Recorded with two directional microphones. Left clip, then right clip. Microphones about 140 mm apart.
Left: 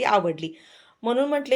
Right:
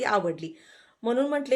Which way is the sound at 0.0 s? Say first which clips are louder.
Left 4 dB; 20° left (ahead or behind).